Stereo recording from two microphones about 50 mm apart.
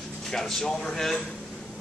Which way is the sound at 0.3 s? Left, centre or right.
Centre.